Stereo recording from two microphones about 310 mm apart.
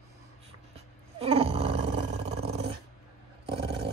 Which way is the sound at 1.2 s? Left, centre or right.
Centre.